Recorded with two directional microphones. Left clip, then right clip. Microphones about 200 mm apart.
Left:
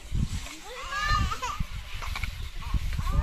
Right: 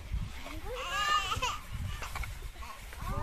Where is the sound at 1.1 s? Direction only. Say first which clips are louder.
Left 1 dB; 45° right (ahead or behind).